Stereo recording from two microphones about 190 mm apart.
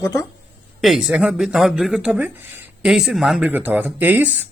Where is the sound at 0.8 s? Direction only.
Centre (ahead or behind).